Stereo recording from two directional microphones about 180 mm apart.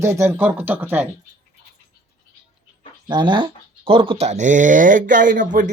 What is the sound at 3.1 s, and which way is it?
Speech, 25° right (ahead or behind).